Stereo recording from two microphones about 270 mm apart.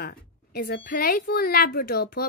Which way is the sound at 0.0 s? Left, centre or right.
Left.